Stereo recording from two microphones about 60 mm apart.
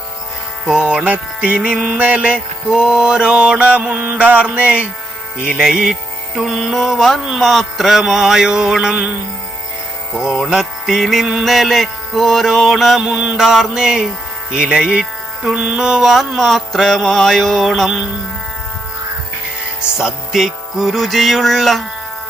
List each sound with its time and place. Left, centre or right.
0.7 s music: centre
5.6 s music: centre
10.5 s mantra: centre
13.0 s music: centre
13.3 s mantra: centre
14.5 s music: centre
15.5 s mantra: centre
19.8 s mantra: centre